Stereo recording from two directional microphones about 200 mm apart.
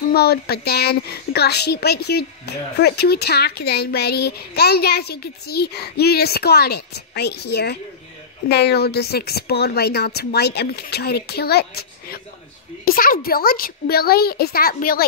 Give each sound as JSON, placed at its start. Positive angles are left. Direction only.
{"t": 0.1, "sound": "a woman's voice", "side_deg": 50}